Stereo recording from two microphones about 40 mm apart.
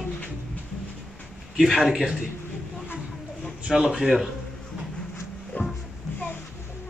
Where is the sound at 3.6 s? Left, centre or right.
Centre.